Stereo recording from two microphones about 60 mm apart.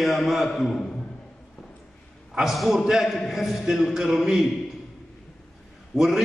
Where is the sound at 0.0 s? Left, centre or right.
Centre.